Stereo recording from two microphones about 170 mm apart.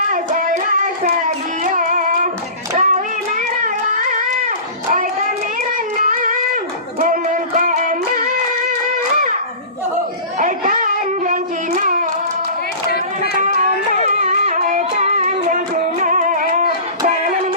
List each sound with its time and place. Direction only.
0.1 s music: 50° right (ahead or behind)
1.6 s music: 50° right (ahead or behind)
2.7 s child singing: 50° right (ahead or behind)
7.0 s music: 55° right (ahead or behind)
10.3 s a sound: 50° right (ahead or behind)
14.2 s music: 45° right (ahead or behind)